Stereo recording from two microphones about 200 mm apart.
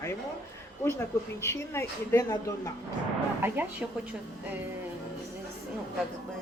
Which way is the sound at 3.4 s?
10° right (ahead or behind).